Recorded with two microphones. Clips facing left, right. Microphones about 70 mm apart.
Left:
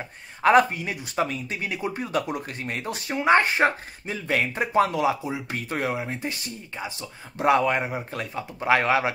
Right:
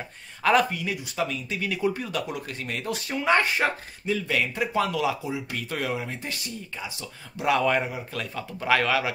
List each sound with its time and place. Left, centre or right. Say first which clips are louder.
0.4 s speech: left 4 dB; left
7.6 s speech: even; centre
7.9 s speech: left 2 dB; left